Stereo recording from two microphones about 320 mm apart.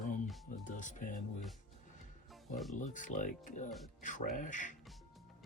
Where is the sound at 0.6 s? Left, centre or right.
Left.